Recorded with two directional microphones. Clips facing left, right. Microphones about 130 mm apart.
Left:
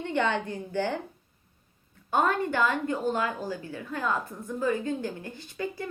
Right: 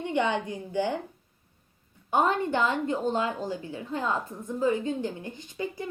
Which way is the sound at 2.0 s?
20° right (ahead or behind).